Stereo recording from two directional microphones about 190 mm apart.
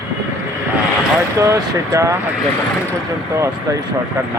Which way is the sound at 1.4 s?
15° right (ahead or behind).